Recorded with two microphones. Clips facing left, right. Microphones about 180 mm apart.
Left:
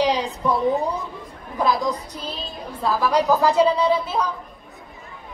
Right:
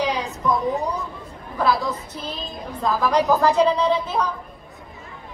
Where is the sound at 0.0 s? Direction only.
30° left (ahead or behind).